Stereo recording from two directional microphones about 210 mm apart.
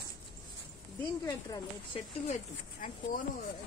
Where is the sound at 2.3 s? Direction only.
40° left (ahead or behind).